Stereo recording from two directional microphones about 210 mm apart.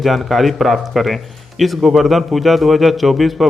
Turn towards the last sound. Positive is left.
turn(degrees=0)  # may be behind; listen again after turning